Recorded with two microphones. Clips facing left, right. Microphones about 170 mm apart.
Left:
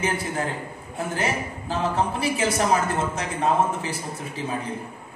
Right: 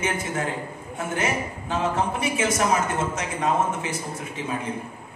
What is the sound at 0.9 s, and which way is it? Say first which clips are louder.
A woman's voice: even; 35° left (ahead or behind).